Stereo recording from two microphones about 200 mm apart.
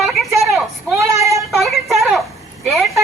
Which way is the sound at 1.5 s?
Centre (ahead or behind).